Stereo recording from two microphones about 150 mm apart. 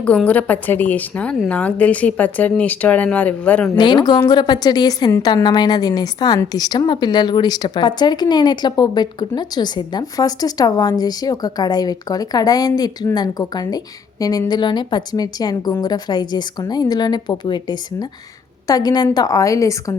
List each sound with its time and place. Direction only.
0.0 s speech: 10° left (ahead or behind)
3.8 s a woman's voice: 30° left (ahead or behind)